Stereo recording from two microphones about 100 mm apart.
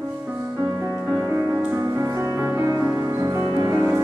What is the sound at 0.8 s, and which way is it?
Music, 25° right (ahead or behind).